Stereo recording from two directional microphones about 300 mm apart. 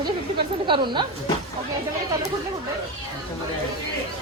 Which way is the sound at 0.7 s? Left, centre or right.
Centre.